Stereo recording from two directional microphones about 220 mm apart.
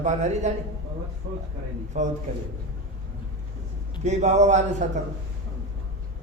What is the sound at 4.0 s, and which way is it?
Speech, 30° right (ahead or behind).